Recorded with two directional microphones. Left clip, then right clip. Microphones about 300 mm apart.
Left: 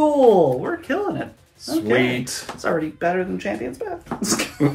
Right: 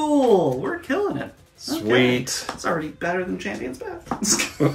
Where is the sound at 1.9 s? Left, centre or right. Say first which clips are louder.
Right 1 dB; centre.